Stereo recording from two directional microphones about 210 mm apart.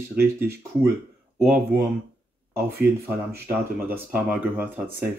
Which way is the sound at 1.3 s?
5° right (ahead or behind).